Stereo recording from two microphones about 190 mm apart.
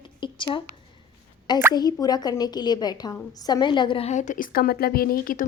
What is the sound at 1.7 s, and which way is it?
Speech, 20° left (ahead or behind).